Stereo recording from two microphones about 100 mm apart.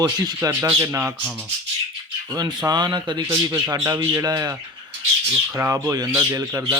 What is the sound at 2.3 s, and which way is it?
Speech, 40° right (ahead or behind).